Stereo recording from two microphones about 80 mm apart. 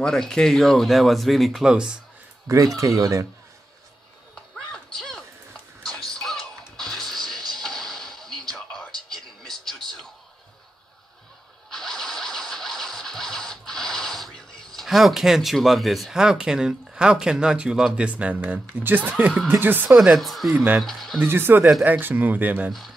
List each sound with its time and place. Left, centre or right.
0.0 s speech: centre
2.4 s speech: right
4.7 s a sound: centre
5.9 s music: centre
9.4 s a sound: centre
11.7 s scratch: centre; by 19.3 s right
19.6 s speech: right
20.0 s speech: centre
20.5 s speech: centre
20.8 s speech: centre
21.2 s speech: right